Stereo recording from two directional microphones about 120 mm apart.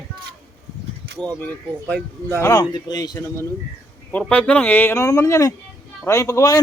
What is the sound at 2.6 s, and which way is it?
Speech, 35° left (ahead or behind).